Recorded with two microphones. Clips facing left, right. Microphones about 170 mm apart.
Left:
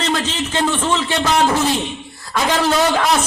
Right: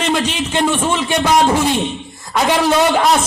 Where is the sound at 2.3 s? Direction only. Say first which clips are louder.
Right 3 dB; 10° right (ahead or behind).